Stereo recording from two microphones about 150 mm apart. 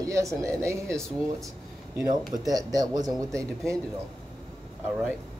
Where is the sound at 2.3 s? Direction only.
25° right (ahead or behind).